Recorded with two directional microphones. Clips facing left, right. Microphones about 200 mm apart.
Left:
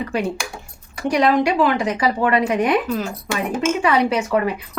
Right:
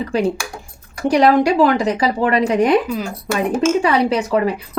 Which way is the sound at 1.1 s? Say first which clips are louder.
Right 4 dB; 35° right (ahead or behind).